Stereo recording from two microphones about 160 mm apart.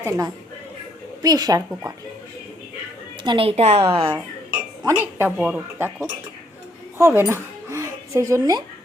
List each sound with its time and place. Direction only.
1.2 s speech: 25° right (ahead or behind)
3.2 s a woman's voice: 35° right (ahead or behind)
4.8 s speech: 15° right (ahead or behind)
7.0 s speech: 15° right (ahead or behind)